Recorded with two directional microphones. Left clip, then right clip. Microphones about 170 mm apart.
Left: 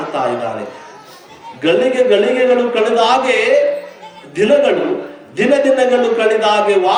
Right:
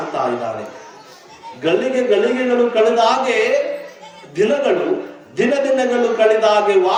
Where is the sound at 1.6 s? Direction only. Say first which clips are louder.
Left 4 dB; 45° left (ahead or behind).